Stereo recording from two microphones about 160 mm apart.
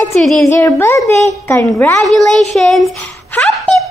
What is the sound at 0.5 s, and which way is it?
Speech, 15° left (ahead or behind).